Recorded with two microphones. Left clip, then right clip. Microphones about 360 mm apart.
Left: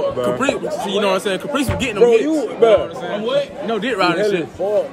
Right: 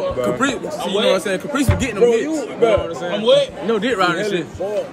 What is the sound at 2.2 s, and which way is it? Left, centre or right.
Music, left.